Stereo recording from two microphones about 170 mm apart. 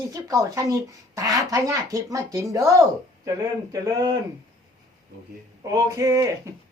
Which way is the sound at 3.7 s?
20° right (ahead or behind).